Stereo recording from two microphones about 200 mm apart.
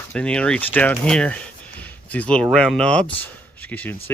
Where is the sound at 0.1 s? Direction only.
5° left (ahead or behind).